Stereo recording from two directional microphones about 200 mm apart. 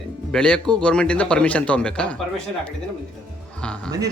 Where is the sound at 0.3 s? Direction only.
5° left (ahead or behind).